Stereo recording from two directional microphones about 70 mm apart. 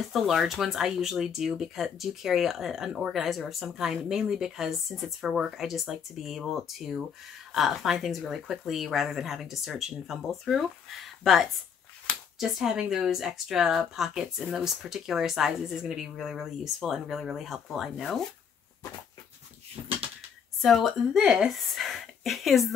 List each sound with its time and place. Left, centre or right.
0.1 s speech: centre
20.6 s speech: centre